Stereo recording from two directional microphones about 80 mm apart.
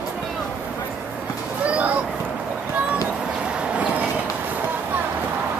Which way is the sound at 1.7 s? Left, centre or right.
Centre.